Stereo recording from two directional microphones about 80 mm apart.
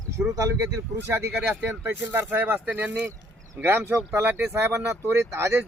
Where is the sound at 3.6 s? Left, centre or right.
Right.